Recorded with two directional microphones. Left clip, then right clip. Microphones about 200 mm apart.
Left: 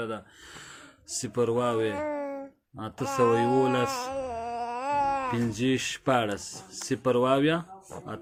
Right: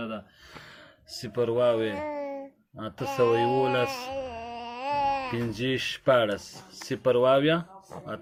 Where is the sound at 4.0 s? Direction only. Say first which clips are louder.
Left 2 dB; 15° left (ahead or behind).